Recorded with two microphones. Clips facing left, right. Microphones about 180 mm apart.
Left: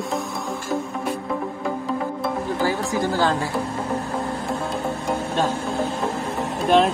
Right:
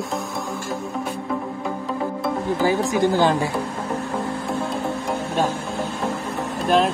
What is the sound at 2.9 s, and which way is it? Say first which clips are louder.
Speech: right 3 dB; 20° right (ahead or behind).